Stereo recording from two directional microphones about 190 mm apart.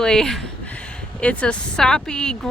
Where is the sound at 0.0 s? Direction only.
5° left (ahead or behind).